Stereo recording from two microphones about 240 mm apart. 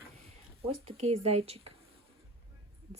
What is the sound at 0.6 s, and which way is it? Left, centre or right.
Speech, right.